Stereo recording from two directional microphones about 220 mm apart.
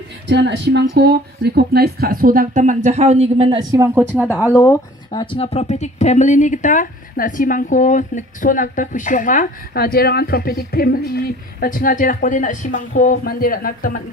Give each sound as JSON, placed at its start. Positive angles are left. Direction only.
{"t": 0.3, "sound": "a woman's voice", "side_deg": -50}
{"t": 3.8, "sound": "speech", "side_deg": -10}
{"t": 4.5, "sound": "speech", "side_deg": 15}